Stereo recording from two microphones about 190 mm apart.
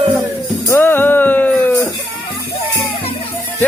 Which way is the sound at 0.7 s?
10° left (ahead or behind).